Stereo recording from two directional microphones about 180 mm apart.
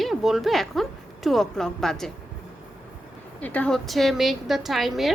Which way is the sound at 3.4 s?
10° left (ahead or behind).